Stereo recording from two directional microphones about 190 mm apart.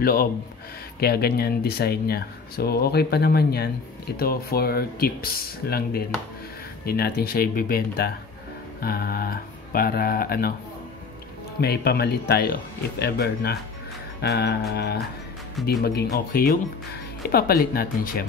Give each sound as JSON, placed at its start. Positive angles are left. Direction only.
{"t": 0.0, "sound": "speech", "side_deg": 50}
{"t": 11.6, "sound": "speech", "side_deg": 55}